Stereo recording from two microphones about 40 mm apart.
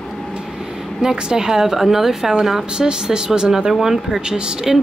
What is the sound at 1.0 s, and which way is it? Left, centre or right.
Speech, centre.